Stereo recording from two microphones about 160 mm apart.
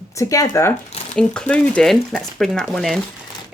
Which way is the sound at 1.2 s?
5° left (ahead or behind).